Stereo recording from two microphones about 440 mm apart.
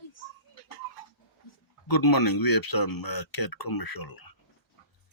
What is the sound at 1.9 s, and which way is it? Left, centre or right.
Speech, left.